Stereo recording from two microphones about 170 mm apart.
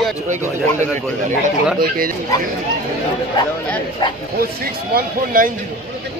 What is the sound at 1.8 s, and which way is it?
Speech, 60° right (ahead or behind).